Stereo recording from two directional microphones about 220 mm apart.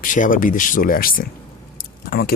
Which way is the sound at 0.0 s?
35° left (ahead or behind).